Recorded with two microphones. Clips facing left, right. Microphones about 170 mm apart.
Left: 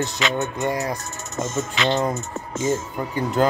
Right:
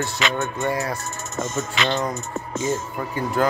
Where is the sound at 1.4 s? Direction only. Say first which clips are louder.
Left 2 dB; 20° left (ahead or behind).